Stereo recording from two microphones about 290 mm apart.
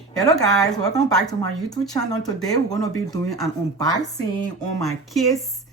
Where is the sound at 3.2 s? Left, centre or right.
Centre.